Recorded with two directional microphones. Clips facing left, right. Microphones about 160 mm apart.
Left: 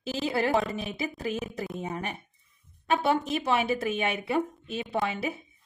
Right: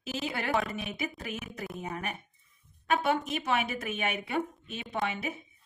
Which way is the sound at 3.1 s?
35° left (ahead or behind).